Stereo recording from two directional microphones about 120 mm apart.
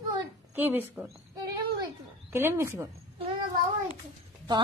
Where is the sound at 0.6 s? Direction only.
15° right (ahead or behind).